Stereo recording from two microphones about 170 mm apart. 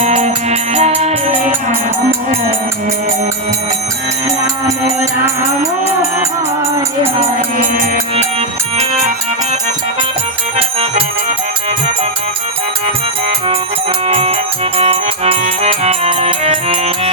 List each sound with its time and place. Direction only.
0.0 s music: 40° right (ahead or behind)
4.9 s music: 15° right (ahead or behind)
8.1 s music: 40° right (ahead or behind)
10.6 s music: 35° right (ahead or behind)
14.1 s music: 35° right (ahead or behind)